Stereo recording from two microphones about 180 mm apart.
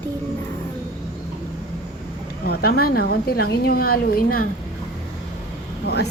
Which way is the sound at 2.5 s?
60° left (ahead or behind).